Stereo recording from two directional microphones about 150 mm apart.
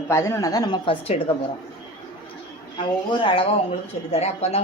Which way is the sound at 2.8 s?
35° left (ahead or behind).